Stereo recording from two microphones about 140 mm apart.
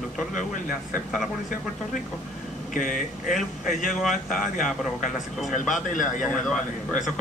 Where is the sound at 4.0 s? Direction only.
Centre (ahead or behind).